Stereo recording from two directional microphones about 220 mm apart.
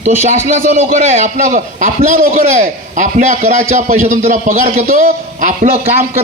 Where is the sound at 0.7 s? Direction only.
30° right (ahead or behind).